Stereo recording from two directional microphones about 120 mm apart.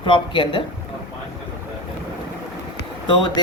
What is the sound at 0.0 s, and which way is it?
Speech, 45° left (ahead or behind).